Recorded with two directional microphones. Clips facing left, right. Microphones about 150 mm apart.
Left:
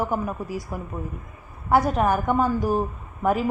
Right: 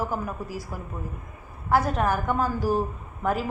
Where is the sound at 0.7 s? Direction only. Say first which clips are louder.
Left 4 dB; centre (ahead or behind).